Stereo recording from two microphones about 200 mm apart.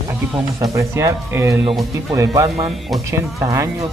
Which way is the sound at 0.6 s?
15° right (ahead or behind).